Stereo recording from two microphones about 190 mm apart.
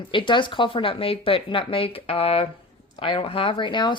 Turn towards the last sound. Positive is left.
turn(degrees=25)  # may be behind; listen again after turning